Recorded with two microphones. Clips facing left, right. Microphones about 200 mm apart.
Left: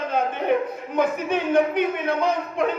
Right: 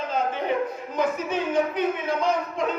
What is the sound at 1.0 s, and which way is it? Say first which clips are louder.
A man's voice: left 3 dB; 60° left (ahead or behind).